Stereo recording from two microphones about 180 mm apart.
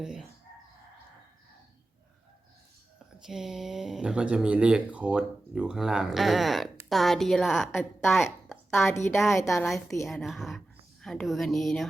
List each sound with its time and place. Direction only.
0.0 s speech: 5° right (ahead or behind)
3.2 s speech: centre (ahead or behind)
8.0 s a woman's voice: 15° left (ahead or behind)
10.1 s speech: centre (ahead or behind)